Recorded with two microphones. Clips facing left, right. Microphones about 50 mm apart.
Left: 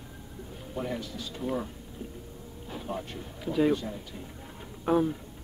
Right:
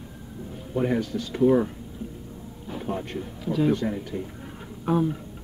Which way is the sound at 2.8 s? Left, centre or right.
Right.